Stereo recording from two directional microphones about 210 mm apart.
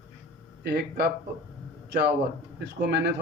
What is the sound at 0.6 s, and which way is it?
Speech, 50° right (ahead or behind).